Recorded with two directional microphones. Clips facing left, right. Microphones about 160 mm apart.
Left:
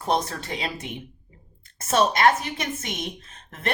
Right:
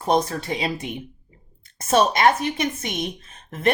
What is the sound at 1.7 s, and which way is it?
Speech, 15° right (ahead or behind).